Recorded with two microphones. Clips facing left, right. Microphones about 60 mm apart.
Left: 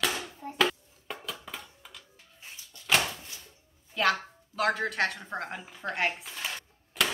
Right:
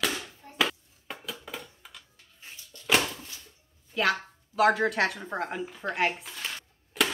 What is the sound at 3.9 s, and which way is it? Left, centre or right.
Speech, centre.